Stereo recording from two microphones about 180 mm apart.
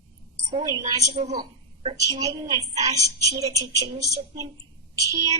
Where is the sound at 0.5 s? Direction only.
20° right (ahead or behind).